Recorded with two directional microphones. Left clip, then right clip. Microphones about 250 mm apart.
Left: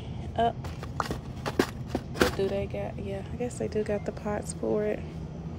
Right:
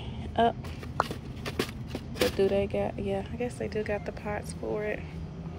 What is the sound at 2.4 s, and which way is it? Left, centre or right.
Speech, centre.